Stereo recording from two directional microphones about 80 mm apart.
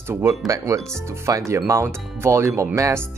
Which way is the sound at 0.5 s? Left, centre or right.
Right.